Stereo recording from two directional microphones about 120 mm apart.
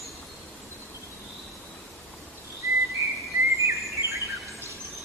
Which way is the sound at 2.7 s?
25° right (ahead or behind).